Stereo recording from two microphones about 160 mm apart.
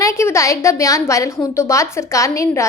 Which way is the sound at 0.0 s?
15° left (ahead or behind).